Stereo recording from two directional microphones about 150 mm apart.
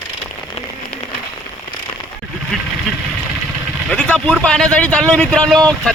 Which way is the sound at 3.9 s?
5° left (ahead or behind).